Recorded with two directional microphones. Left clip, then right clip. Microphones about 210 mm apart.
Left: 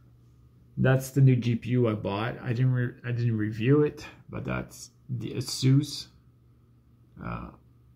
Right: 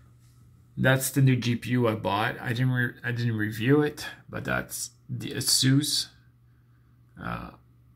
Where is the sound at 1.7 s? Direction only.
15° right (ahead or behind).